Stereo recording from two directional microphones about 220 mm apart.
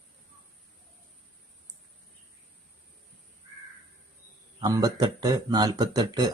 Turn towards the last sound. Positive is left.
turn(degrees=-20)  # may be behind; listen again after turning